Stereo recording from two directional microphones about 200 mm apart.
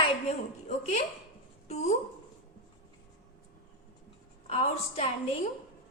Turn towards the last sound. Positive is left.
turn(degrees=30)  # may be behind; listen again after turning